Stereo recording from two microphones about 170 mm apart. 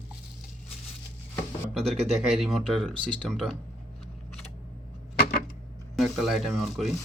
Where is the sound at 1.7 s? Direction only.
Centre (ahead or behind).